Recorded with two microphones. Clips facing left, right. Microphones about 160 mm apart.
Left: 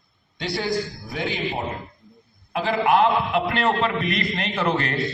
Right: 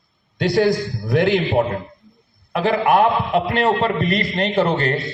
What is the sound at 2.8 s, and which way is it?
Speech, 55° right (ahead or behind).